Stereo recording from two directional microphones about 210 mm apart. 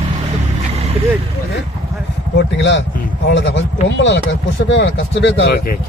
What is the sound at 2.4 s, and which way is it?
Speech, 55° left (ahead or behind).